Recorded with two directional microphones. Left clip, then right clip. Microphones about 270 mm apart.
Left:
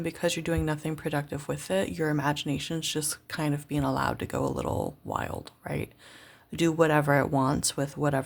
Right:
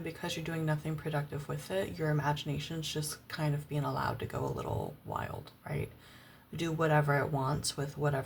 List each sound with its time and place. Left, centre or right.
0.0 s speech: left